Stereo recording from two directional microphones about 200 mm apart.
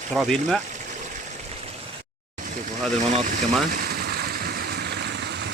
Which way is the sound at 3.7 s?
50° right (ahead or behind).